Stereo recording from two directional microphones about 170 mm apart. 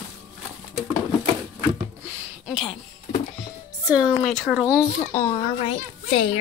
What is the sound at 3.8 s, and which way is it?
Speech, 25° left (ahead or behind).